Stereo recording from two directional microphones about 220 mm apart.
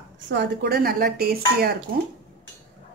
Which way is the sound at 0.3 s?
50° right (ahead or behind).